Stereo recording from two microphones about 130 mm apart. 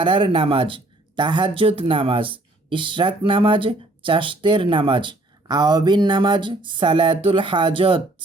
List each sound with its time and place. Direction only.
0.0 s speech: 40° right (ahead or behind)